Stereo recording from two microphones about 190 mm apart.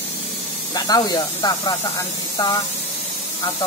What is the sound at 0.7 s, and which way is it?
Speech, 20° left (ahead or behind).